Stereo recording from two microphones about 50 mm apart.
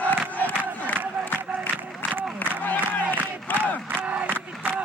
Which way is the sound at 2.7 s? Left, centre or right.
Left.